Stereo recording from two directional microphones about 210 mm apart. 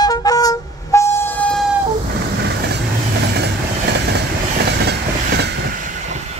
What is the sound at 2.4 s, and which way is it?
Vehicle, 50° right (ahead or behind).